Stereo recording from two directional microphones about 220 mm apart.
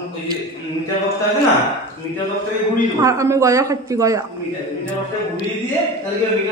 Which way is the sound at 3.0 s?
15° right (ahead or behind).